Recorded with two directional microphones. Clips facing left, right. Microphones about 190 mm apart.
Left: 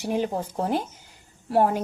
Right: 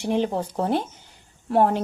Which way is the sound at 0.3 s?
35° right (ahead or behind).